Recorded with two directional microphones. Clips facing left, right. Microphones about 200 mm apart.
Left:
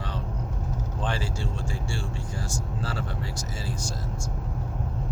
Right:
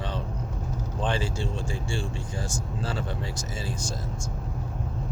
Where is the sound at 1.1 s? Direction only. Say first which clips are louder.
Right 2 dB; 20° right (ahead or behind).